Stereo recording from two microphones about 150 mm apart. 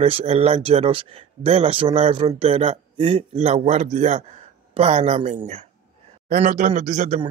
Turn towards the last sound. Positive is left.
turn(degrees=-55)  # may be behind; listen again after turning